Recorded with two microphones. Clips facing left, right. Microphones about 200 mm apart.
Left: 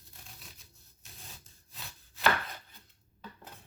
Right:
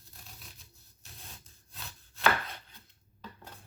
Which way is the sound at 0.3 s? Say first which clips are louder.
Right 1 dB; centre (ahead or behind).